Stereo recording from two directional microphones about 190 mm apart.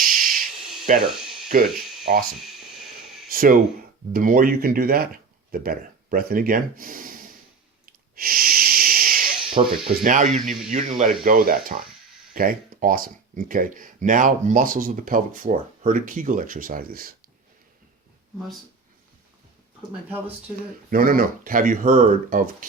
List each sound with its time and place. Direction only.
0.0 s a sound: 50° right (ahead or behind)
0.9 s speech: 40° right (ahead or behind)
7.9 s wheeze: 50° right (ahead or behind)
9.6 s speech: 35° right (ahead or behind)
10.4 s a man's voice: centre (ahead or behind)
10.7 s speech: 40° right (ahead or behind)
20.9 s speech: 50° right (ahead or behind)